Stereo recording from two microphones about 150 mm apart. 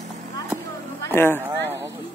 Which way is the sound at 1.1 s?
15° left (ahead or behind).